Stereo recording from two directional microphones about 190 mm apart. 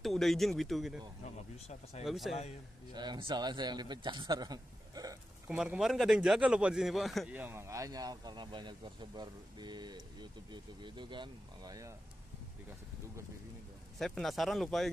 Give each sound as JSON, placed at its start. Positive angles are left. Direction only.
{"t": 0.0, "sound": "speech", "side_deg": 0}
{"t": 2.0, "sound": "speech", "side_deg": 0}
{"t": 2.9, "sound": "a man's voice", "side_deg": -20}
{"t": 5.6, "sound": "a man's voice", "side_deg": 0}
{"t": 13.9, "sound": "speech", "side_deg": 0}